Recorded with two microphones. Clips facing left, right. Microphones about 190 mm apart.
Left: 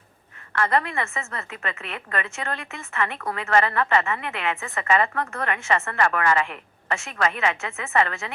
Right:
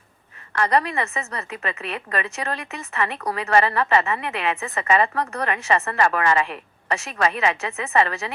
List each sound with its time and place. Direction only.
0.5 s a woman's voice: 20° right (ahead or behind)